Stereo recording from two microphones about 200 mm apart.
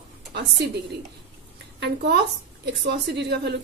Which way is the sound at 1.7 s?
55° right (ahead or behind).